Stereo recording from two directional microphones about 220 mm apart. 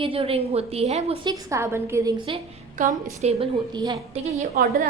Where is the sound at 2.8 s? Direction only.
35° right (ahead or behind).